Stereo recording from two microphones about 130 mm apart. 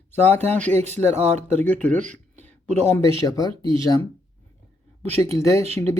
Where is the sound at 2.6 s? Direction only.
60° right (ahead or behind).